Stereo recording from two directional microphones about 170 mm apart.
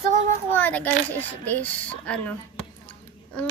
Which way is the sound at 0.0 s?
45° right (ahead or behind).